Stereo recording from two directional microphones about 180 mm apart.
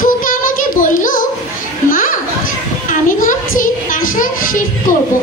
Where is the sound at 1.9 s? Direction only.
50° left (ahead or behind).